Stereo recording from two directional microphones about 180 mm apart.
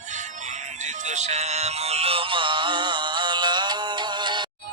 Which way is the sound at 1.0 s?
40° right (ahead or behind).